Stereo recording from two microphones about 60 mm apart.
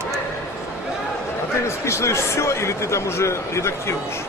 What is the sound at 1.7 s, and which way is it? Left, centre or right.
Speech, left.